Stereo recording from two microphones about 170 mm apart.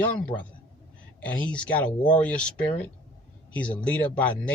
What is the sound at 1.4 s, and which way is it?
A man's voice, 5° left (ahead or behind).